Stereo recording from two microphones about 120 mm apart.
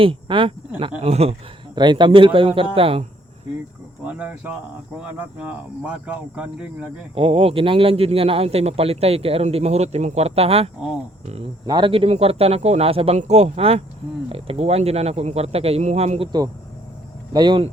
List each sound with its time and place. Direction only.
0.0 s a man's voice: 45° right (ahead or behind)
1.7 s speech: 40° right (ahead or behind)
4.0 s speech: 10° right (ahead or behind)
7.2 s a man's voice: 50° right (ahead or behind)
11.6 s speech: 35° right (ahead or behind)
11.9 s a man's voice: 55° right (ahead or behind)
13.1 s a man's voice: 65° right (ahead or behind)
17.3 s speech: 40° right (ahead or behind)